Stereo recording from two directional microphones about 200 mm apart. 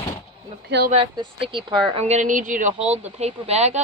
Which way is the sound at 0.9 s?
25° right (ahead or behind).